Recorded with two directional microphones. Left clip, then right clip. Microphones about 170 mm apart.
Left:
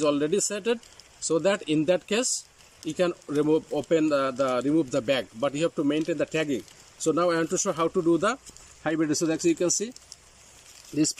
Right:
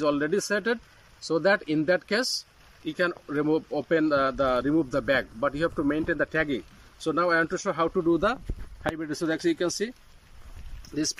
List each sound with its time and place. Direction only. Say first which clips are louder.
0.0 s speech: left 1 dB; 15° left (ahead or behind)
9.3 s speech: left 1 dB; 15° left (ahead or behind)
10.9 s speech: left 4 dB; 25° left (ahead or behind)